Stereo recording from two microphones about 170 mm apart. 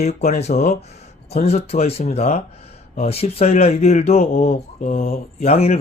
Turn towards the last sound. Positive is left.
turn(degrees=40)  # may be behind; listen again after turning